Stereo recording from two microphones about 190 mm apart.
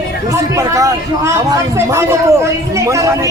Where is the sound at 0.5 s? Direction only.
15° right (ahead or behind).